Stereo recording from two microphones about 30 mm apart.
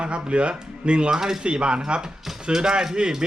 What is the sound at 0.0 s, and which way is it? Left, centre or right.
Speech, right.